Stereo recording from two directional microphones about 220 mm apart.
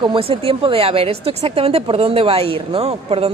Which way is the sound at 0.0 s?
25° right (ahead or behind).